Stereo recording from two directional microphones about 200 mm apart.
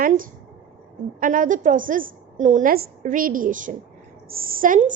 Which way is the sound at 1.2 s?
40° right (ahead or behind).